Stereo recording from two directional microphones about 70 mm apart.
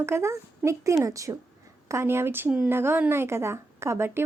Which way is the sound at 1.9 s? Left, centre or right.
Right.